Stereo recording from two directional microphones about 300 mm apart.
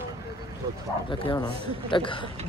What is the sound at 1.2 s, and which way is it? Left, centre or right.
Speech, centre.